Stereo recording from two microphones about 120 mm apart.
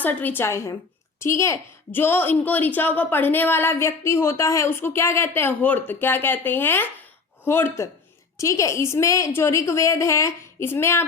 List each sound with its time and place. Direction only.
0.0 s a woman's voice: 15° left (ahead or behind)